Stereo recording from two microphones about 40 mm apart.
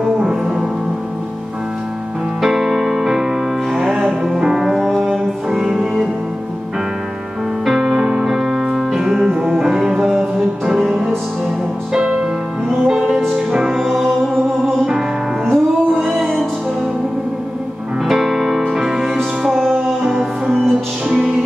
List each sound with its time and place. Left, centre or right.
0.0 s music: centre
2.4 s music: centre
7.6 s music: centre
11.9 s music: right
14.0 s music: centre
18.0 s music: centre
20.6 s music: centre